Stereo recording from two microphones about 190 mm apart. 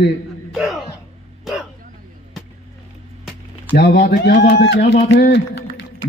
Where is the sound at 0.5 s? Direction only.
Centre (ahead or behind).